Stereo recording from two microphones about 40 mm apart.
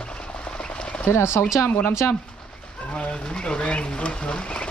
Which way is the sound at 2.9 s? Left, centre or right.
Left.